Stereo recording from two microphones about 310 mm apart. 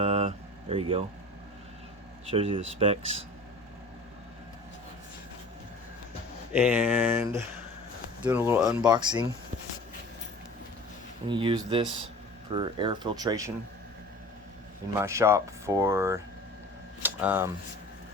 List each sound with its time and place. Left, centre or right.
0.0 s vehicle: centre
2.3 s speech: centre
6.5 s speech: centre
11.3 s speech: centre
14.9 s speech: centre
17.0 s a sound: centre